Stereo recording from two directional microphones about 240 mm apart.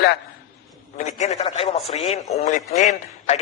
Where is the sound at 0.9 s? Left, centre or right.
Left.